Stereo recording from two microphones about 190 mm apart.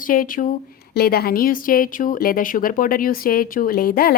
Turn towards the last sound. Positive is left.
turn(degrees=50)  # may be behind; listen again after turning